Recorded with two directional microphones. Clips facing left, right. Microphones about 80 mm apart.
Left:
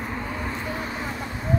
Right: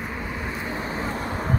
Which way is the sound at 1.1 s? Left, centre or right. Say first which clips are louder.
Right 3 dB; right.